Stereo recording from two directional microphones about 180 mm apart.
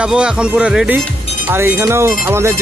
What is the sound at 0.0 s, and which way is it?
Speech, 5° right (ahead or behind).